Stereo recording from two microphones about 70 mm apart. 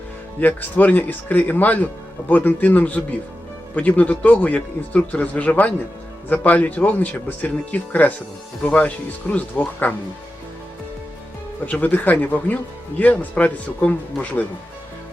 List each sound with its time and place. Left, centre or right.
0.3 s speech: left
11.6 s speech: left